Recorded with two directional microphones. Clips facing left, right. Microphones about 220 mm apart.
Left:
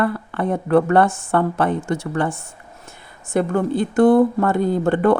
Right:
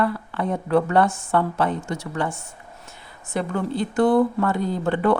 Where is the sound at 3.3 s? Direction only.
50° left (ahead or behind).